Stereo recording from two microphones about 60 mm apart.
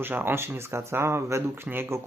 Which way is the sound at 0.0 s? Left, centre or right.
Right.